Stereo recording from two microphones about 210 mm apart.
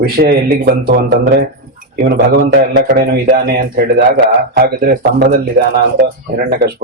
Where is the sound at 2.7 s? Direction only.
45° right (ahead or behind).